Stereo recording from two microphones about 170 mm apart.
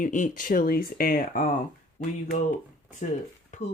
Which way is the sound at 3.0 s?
45° left (ahead or behind).